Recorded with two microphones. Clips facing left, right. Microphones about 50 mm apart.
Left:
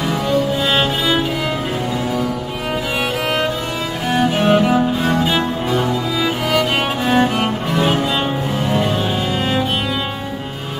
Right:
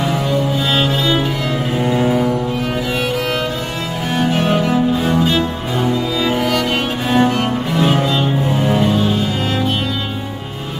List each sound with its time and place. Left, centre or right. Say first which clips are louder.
0.1 s music: even; centre
1.9 s music: right 8 dB; right
4.1 s music: left 2 dB; centre
7.1 s music: right 2 dB; centre